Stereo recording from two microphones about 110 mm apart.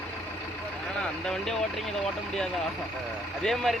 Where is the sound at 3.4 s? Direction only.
5° left (ahead or behind).